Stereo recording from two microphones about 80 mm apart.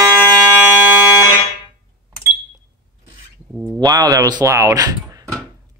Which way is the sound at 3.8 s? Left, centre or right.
Right.